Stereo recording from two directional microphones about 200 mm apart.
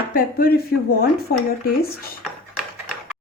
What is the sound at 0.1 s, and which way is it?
Speech, 45° left (ahead or behind).